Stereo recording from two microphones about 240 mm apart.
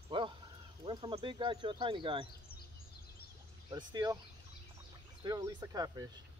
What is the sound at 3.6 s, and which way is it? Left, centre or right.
Speech, centre.